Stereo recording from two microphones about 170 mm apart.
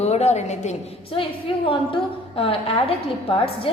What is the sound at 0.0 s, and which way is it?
A woman's voice, 40° left (ahead or behind).